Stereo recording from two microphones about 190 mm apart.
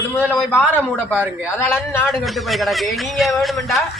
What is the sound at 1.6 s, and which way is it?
A man's voice, 10° left (ahead or behind).